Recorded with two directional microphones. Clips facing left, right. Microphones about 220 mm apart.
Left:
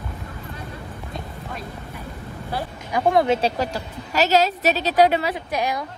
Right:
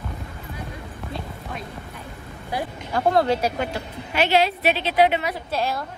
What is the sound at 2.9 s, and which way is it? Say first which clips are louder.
Speech: left 1 dB; 15° left (ahead or behind).